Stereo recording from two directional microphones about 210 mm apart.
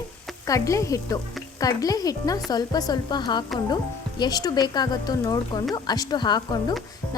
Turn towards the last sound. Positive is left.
turn(degrees=20)  # may be behind; listen again after turning